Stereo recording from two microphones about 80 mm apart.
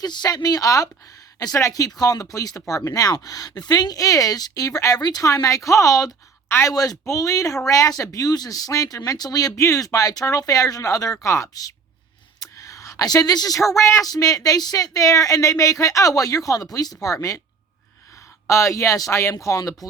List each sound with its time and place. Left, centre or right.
0.0 s speech: left
12.4 s a sound: left
13.9 s speech: left
18.4 s speech: left